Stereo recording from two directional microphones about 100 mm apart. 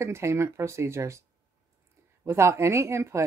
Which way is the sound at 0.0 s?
30° right (ahead or behind).